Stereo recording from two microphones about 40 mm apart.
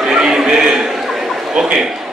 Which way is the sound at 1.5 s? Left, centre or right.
Centre.